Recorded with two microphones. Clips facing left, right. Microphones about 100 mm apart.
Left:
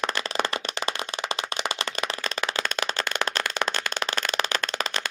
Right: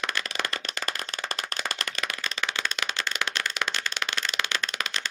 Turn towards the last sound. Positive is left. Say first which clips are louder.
# left 3 dB
turn(degrees=40)  # may be behind; listen again after turning